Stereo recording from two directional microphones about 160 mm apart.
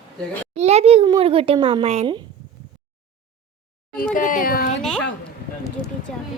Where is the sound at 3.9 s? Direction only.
60° left (ahead or behind).